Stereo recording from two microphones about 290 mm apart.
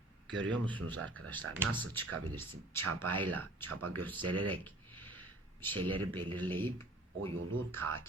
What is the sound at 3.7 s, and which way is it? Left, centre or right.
Speech, right.